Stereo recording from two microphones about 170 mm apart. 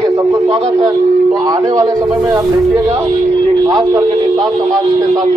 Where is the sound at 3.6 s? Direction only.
20° right (ahead or behind).